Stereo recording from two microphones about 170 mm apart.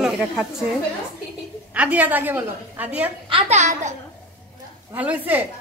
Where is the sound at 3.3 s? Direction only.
35° right (ahead or behind).